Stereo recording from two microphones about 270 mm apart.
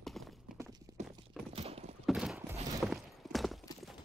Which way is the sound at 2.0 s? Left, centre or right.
Centre.